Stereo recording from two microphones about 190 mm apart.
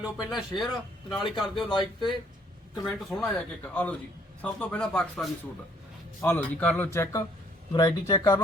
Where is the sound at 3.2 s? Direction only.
10° left (ahead or behind).